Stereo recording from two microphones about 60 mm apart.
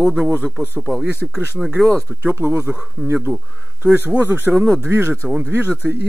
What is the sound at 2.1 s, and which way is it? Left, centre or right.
Speech, right.